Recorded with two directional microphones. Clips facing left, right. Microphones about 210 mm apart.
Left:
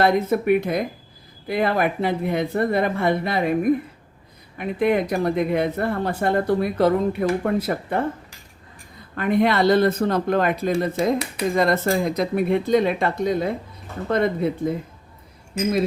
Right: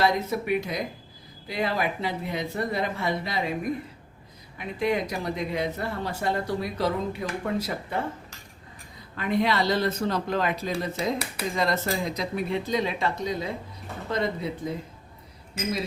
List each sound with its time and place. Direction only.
0.0 s speech: 55° left (ahead or behind)
9.1 s speech: 55° left (ahead or behind)